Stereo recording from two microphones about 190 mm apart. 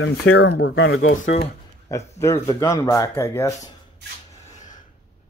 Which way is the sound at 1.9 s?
15° left (ahead or behind).